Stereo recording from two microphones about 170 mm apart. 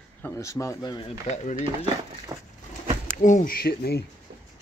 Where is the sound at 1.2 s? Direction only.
45° left (ahead or behind).